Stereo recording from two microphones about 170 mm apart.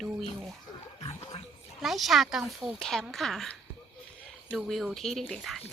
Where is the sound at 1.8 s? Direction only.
Centre (ahead or behind).